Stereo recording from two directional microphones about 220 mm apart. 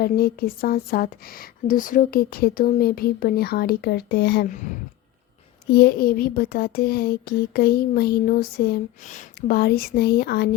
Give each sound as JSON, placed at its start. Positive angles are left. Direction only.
{"t": 0.0, "sound": "speech", "side_deg": 45}
{"t": 5.7, "sound": "speech", "side_deg": 45}